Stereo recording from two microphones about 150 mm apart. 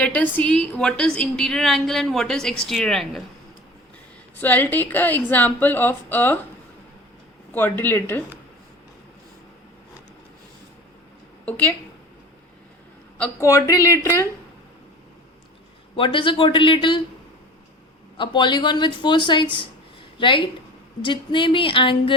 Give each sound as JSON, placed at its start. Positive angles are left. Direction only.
{"t": 0.0, "sound": "a woman's voice", "side_deg": 10}
{"t": 4.4, "sound": "speech", "side_deg": 10}
{"t": 7.5, "sound": "speech", "side_deg": 15}
{"t": 11.4, "sound": "a woman's voice", "side_deg": 10}
{"t": 13.4, "sound": "speech", "side_deg": 20}
{"t": 16.0, "sound": "speech", "side_deg": 35}
{"t": 18.2, "sound": "speech", "side_deg": 30}